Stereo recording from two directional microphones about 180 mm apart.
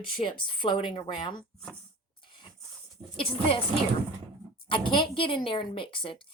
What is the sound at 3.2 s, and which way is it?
Speech, 30° left (ahead or behind).